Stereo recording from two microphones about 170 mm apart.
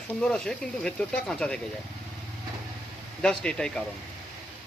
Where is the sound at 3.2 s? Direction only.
5° left (ahead or behind).